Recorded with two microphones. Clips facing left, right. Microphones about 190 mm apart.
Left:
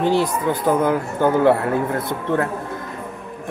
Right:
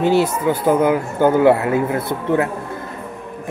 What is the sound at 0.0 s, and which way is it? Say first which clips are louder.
Speech: right 3 dB; 5° right (ahead or behind).